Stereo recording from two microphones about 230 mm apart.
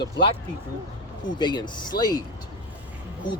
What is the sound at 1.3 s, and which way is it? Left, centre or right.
Speech, centre.